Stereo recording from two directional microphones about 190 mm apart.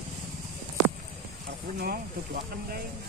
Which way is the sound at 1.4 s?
55° right (ahead or behind).